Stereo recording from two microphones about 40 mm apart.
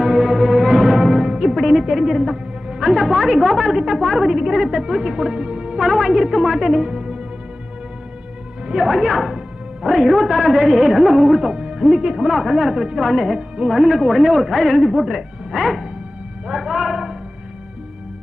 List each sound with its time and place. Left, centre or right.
0.0 s music: centre
1.5 s a woman's voice: centre; by 5.7 s right
5.7 s a woman's voice: centre
8.7 s a woman's voice: centre